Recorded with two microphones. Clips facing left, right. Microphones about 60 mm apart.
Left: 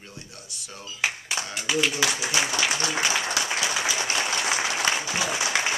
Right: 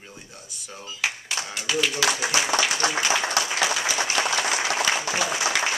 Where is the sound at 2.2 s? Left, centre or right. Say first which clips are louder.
Right 2 dB; centre.